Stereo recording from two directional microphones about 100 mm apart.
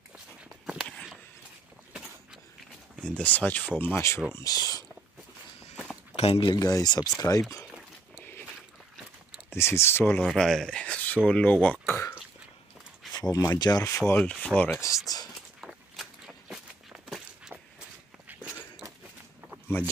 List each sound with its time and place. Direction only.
3.1 s speech: 15° left (ahead or behind)
4.4 s speech: 35° left (ahead or behind)
6.1 s speech: 85° left
6.4 s speech: 40° left (ahead or behind)
8.2 s a sound: 20° left (ahead or behind)
9.5 s speech: 25° left (ahead or behind)
10.2 s speech: 5° left (ahead or behind); by 12.2 s 25° left (ahead or behind)
13.1 s speech: 40° left (ahead or behind)
14.1 s speech: 10° left (ahead or behind)
15.6 s walk: 5° right (ahead or behind)
18.3 s a sound: 10° right (ahead or behind)
19.7 s speech: 20° left (ahead or behind)